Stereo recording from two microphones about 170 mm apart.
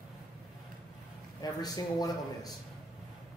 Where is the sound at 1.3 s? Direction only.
20° left (ahead or behind).